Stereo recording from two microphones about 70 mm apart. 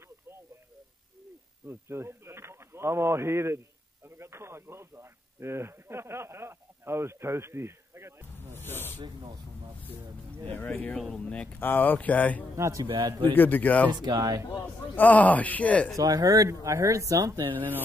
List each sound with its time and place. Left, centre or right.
1.7 s speech: right
8.5 s speech: left
9.0 s speech: right
10.4 s speech: left
11.6 s speech: left
12.5 s speech: right
12.8 s speech: right
13.3 s speech: left
14.0 s speech: right
15.0 s speech: left
16.0 s speech: right
16.6 s speech: right
17.6 s speech: right